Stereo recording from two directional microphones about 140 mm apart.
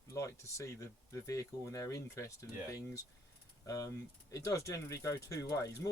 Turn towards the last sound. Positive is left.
turn(degrees=25)  # may be behind; listen again after turning